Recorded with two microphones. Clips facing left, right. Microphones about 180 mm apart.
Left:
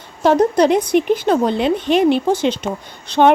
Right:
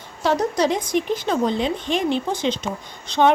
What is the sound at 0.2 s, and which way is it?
A woman's voice, 55° left (ahead or behind).